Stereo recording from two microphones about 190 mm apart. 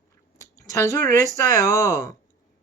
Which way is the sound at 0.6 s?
15° left (ahead or behind).